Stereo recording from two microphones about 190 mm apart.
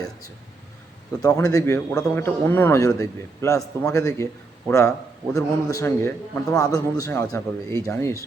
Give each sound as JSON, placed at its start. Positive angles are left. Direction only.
{"t": 1.4, "sound": "a man's voice", "side_deg": 20}